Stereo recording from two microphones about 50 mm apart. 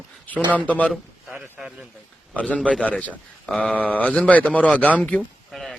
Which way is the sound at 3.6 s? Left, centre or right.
Left.